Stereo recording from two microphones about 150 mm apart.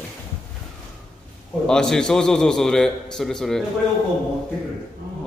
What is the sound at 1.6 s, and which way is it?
A man's voice, 5° left (ahead or behind).